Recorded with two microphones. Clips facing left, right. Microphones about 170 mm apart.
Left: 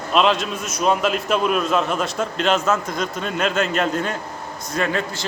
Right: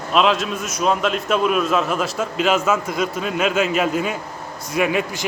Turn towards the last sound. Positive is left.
turn(degrees=-15)  # may be behind; listen again after turning